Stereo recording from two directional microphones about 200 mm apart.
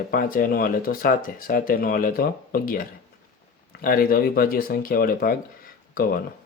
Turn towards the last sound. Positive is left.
turn(degrees=45)  # may be behind; listen again after turning